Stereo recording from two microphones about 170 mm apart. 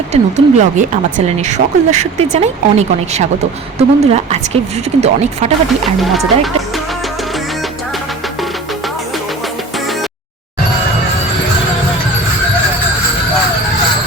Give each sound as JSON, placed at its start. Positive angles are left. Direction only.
{"t": 0.1, "sound": "speech", "side_deg": -45}
{"t": 6.0, "sound": "speech", "side_deg": 0}